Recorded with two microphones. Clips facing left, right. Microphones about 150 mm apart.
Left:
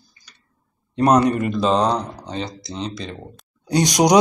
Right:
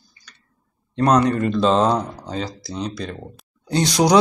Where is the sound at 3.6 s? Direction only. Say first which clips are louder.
Left 1 dB; 15° left (ahead or behind).